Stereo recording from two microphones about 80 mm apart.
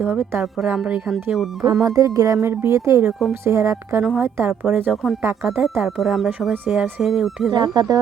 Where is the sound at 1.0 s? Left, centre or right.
Centre.